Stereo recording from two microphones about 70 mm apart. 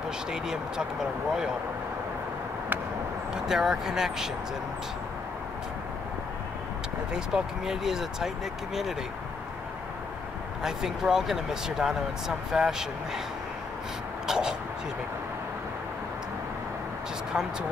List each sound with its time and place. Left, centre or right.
0.3 s speech: centre
3.3 s speech: centre
7.2 s speech: centre
10.6 s speech: centre
14.2 s a sound: centre
17.3 s speech: centre